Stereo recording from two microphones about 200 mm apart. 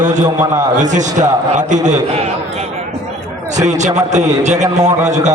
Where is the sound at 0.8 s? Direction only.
35° right (ahead or behind).